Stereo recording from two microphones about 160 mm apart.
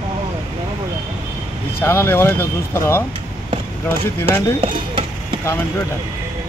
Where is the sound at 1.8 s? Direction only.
15° left (ahead or behind).